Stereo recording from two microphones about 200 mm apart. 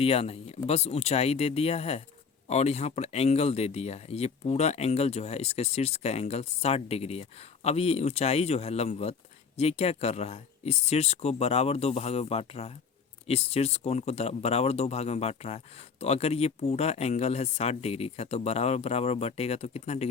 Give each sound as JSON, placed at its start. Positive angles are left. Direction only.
{"t": 0.0, "sound": "speech", "side_deg": 30}